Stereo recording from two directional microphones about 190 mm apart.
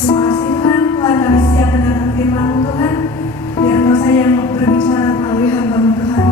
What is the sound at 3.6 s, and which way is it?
Music, 15° left (ahead or behind).